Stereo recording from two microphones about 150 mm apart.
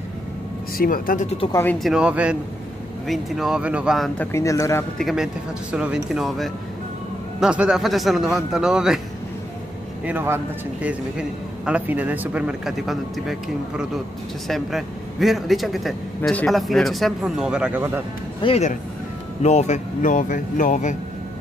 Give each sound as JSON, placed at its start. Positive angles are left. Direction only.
{"t": 0.7, "sound": "speech", "side_deg": 70}
{"t": 1.5, "sound": "speech", "side_deg": 15}
{"t": 1.8, "sound": "a man's voice", "side_deg": -5}
{"t": 4.2, "sound": "speech", "side_deg": 20}
{"t": 4.9, "sound": "speech", "side_deg": 0}
{"t": 10.0, "sound": "a man's voice", "side_deg": -15}
{"t": 18.4, "sound": "speech", "side_deg": 40}